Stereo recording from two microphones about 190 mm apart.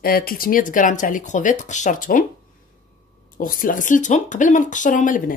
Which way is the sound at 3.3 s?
45° left (ahead or behind).